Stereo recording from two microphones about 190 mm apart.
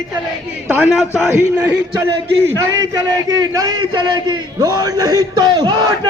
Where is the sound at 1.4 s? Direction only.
15° right (ahead or behind).